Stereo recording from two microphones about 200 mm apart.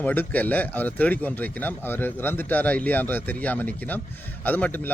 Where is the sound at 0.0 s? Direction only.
10° left (ahead or behind).